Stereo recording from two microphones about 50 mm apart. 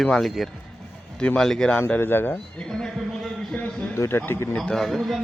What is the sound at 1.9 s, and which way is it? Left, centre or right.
Speech, left.